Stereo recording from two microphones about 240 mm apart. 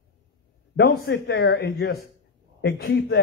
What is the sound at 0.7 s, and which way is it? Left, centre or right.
A man's voice, left.